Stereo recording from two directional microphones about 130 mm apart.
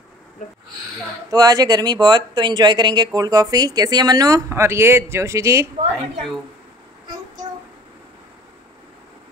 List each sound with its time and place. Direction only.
0.4 s speech: 75° left (ahead or behind)
1.3 s speech: 30° right (ahead or behind)